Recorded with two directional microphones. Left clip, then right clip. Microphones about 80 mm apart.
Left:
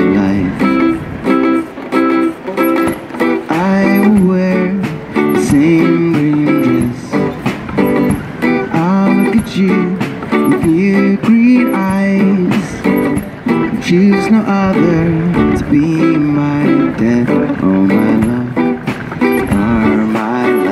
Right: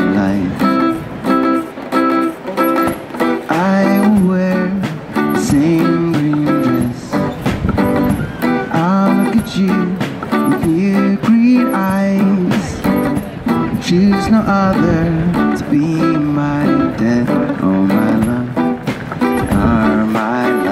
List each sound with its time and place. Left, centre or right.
0.0 s music: left